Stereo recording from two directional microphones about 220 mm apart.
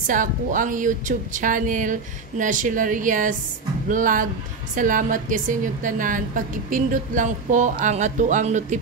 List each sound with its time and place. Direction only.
0.0 s a woman's voice: 35° right (ahead or behind)